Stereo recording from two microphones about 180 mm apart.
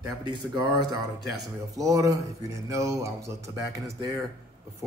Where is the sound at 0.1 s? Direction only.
20° right (ahead or behind).